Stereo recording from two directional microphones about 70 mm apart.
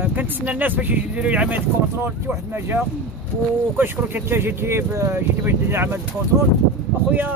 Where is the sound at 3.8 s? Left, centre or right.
Right.